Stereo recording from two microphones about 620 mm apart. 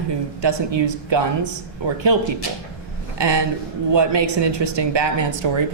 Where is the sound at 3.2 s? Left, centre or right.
Right.